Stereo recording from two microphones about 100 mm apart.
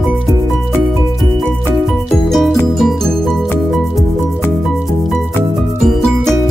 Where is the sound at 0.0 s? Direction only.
5° right (ahead or behind).